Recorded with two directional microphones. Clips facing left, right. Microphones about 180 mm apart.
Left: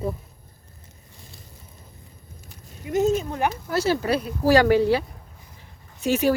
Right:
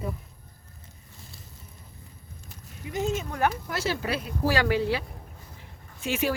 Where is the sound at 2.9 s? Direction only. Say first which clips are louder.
Left 8 dB; 40° left (ahead or behind).